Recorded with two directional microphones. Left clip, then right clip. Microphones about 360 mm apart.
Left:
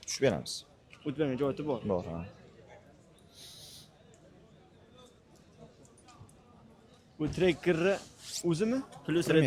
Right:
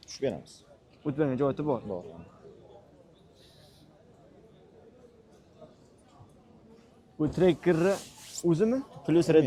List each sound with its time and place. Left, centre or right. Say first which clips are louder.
0.0 s a man's voice: left 3 dB; left
1.0 s speech: right 4 dB; centre
7.2 s speech: right 4 dB; centre